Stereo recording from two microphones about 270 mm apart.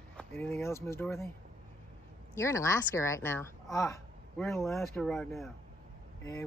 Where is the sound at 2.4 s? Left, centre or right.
Centre.